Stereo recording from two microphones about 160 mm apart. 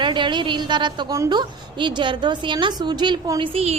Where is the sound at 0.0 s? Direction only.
30° right (ahead or behind).